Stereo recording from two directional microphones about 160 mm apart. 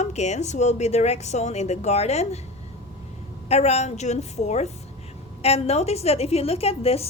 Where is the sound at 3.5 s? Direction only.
45° left (ahead or behind).